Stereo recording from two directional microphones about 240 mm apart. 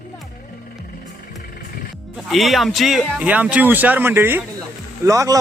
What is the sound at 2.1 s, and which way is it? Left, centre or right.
A man's voice, centre.